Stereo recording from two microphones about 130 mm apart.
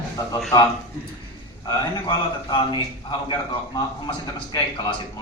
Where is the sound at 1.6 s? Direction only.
35° left (ahead or behind).